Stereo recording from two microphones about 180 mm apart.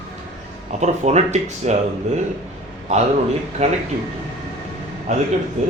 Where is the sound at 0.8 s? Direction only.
40° right (ahead or behind).